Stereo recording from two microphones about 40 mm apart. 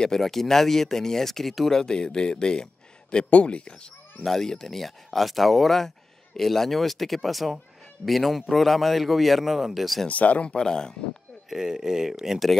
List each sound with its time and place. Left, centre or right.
0.0 s speech: centre; by 3.9 s left
4.2 s speech: centre
10.0 s speech: left
10.5 s speech: centre
11.4 s speech: centre